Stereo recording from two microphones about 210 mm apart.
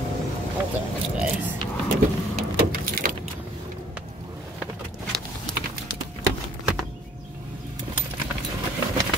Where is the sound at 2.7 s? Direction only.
45° right (ahead or behind).